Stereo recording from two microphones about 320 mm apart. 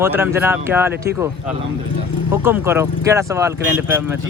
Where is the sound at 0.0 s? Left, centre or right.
Centre.